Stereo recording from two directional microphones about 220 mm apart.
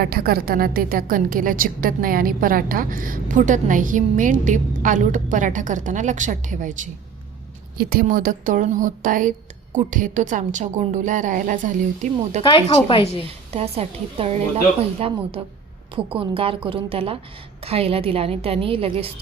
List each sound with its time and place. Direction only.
0.0 s a woman's voice: 45° right (ahead or behind)
12.4 s speech: 25° left (ahead or behind)
13.2 s a woman's voice: 25° right (ahead or behind)